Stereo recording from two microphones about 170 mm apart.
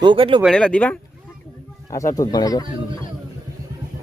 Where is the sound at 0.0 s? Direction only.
30° right (ahead or behind).